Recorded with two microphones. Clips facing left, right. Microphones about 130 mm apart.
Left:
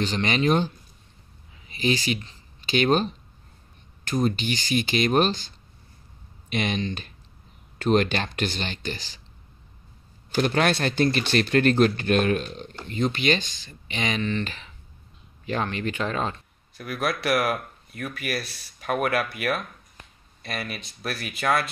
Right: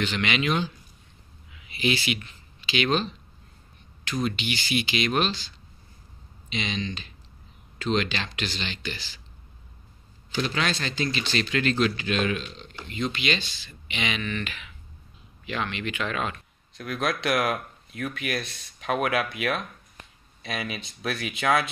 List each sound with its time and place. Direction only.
0.0 s speech: 40° left (ahead or behind)
2.6 s speech: 50° left (ahead or behind)
6.5 s speech: 50° left (ahead or behind)
10.3 s speech: 50° left (ahead or behind); by 16.3 s 30° left (ahead or behind)
16.7 s speech: 5° left (ahead or behind)